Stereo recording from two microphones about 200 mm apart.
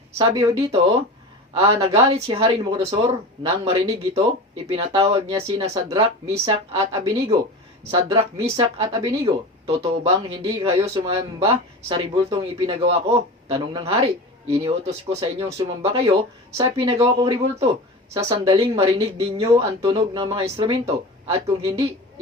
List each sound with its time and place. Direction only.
0.2 s speech: 20° right (ahead or behind)
6.7 s speech: 30° right (ahead or behind)